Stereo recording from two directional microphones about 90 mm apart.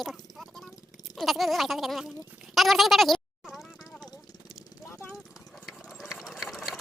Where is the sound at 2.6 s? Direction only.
Centre (ahead or behind).